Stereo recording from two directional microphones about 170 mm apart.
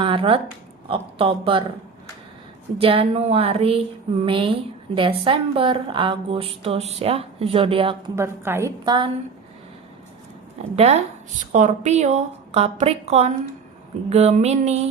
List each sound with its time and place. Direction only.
0.0 s a woman's voice: 30° right (ahead or behind)
2.7 s a woman's voice: 35° right (ahead or behind)
8.1 s a woman's voice: 15° right (ahead or behind)
8.8 s a woman's voice: 25° right (ahead or behind)
10.8 s a woman's voice: 40° right (ahead or behind)